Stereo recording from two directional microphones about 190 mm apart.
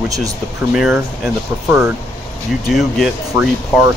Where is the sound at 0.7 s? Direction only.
Centre (ahead or behind).